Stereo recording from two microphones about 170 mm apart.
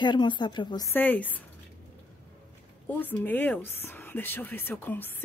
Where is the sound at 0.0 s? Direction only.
25° left (ahead or behind).